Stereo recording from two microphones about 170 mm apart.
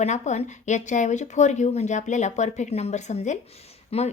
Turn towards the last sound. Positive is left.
turn(degrees=35)  # may be behind; listen again after turning